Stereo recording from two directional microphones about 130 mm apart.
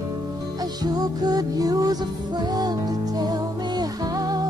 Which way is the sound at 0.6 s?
30° right (ahead or behind).